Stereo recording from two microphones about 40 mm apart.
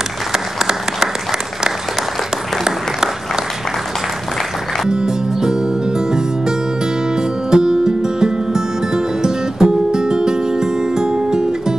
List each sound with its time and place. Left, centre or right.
0.3 s applause: centre
4.8 s music: centre
7.5 s music: centre